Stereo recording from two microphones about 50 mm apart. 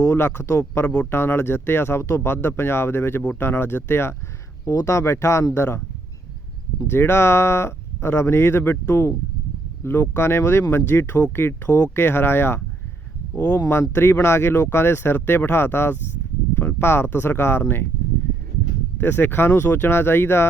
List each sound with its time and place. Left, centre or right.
0.2 s speech: left
2.3 s speech: left
4.6 s speech: left
6.8 s speech: left
8.9 s speech: left
9.8 s speech: left
10.6 s speech: left
13.3 s speech: left
13.7 s speech: left
18.9 s speech: left